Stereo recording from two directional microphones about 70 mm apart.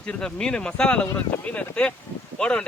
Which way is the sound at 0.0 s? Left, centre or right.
Centre.